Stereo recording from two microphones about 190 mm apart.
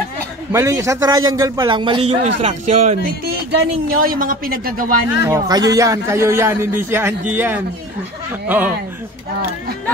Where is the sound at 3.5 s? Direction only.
55° right (ahead or behind).